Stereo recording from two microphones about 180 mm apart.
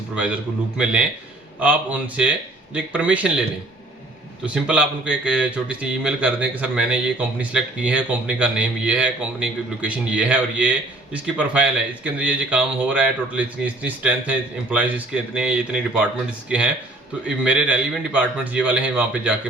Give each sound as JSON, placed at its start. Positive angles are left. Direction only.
{"t": 1.5, "sound": "speech", "side_deg": -10}
{"t": 4.4, "sound": "speech", "side_deg": -5}